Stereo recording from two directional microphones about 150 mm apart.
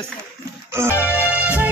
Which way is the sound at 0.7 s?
15° right (ahead or behind).